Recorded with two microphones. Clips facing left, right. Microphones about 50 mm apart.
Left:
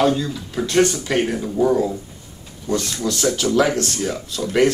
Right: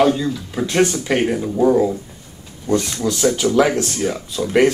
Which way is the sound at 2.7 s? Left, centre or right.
Centre.